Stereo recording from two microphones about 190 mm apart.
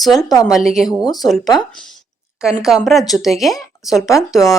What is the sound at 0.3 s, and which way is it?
Speech, 20° left (ahead or behind).